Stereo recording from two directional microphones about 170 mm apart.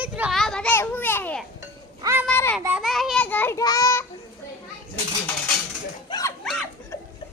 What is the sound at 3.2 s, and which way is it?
Speech, 10° left (ahead or behind).